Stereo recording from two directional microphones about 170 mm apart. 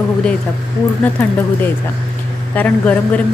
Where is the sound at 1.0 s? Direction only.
10° left (ahead or behind).